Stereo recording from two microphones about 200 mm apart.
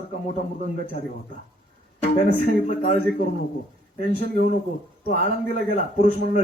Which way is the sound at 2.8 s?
45° left (ahead or behind).